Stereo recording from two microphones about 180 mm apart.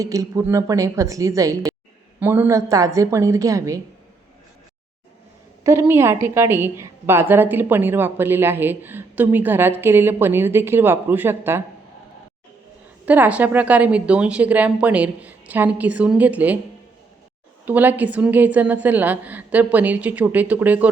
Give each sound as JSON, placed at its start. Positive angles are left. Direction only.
{"t": 0.0, "sound": "a woman's voice", "side_deg": -20}
{"t": 5.8, "sound": "a woman's voice", "side_deg": -15}
{"t": 13.1, "sound": "a woman's voice", "side_deg": -10}
{"t": 17.7, "sound": "a woman's voice", "side_deg": -10}